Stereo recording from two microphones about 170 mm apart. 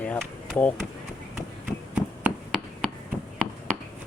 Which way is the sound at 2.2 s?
Centre (ahead or behind).